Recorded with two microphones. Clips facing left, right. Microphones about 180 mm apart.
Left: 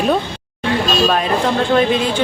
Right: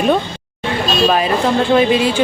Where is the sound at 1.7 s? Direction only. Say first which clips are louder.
Right 3 dB; 5° right (ahead or behind).